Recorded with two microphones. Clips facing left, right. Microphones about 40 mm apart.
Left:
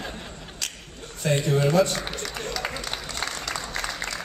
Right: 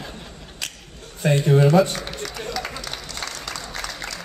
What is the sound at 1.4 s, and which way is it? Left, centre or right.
Speech, centre.